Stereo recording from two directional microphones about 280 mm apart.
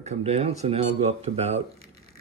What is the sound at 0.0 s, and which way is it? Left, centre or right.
Speech, right.